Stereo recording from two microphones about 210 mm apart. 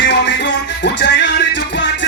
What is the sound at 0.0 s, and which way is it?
Music, 55° left (ahead or behind).